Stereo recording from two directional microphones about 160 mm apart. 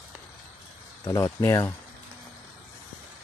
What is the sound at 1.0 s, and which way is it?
Speech, 20° left (ahead or behind).